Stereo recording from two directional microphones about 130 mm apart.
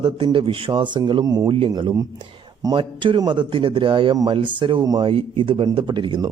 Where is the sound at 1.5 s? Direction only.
40° right (ahead or behind).